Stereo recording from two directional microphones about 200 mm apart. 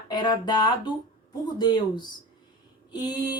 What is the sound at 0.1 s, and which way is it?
Speech, 20° left (ahead or behind).